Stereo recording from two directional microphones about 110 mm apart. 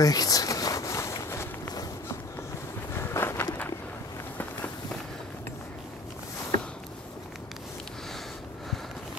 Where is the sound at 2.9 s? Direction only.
20° left (ahead or behind).